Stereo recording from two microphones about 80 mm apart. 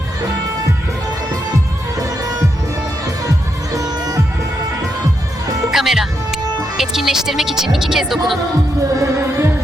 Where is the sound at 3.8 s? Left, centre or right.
Right.